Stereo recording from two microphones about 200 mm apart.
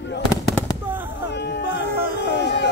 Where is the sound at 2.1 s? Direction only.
60° left (ahead or behind).